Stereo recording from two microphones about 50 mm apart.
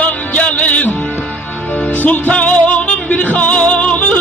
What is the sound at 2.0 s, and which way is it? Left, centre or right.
Music, left.